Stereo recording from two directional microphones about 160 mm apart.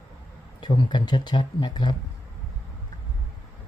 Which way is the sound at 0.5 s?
30° left (ahead or behind).